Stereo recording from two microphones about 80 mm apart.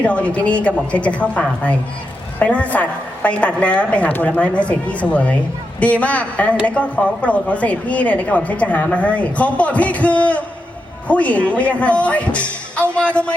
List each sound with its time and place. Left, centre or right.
0.0 s speech: centre